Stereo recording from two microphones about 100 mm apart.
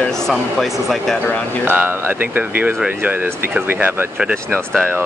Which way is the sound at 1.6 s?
20° right (ahead or behind).